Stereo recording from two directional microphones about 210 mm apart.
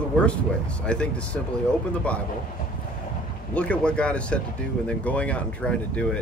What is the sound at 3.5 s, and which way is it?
Speech, 5° left (ahead or behind).